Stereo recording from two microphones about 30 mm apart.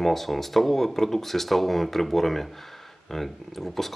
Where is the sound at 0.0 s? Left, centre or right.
Centre.